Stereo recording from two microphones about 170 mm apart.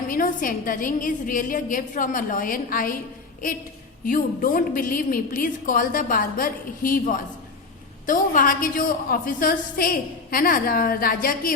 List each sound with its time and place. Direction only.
0.1 s a woman's voice: 55° left (ahead or behind)
4.0 s a woman's voice: 55° left (ahead or behind)